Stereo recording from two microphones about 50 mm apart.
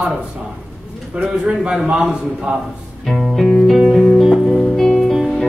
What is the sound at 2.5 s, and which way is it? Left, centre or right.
Speech, right.